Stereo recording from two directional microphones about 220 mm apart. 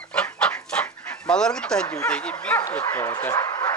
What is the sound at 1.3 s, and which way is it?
Speech, 5° left (ahead or behind).